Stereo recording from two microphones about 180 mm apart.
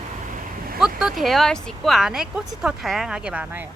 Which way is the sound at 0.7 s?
Centre (ahead or behind).